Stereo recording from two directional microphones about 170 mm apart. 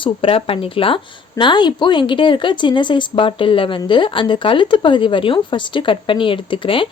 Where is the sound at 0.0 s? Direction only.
30° left (ahead or behind).